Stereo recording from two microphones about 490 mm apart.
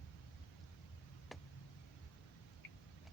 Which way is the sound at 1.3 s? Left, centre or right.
Centre.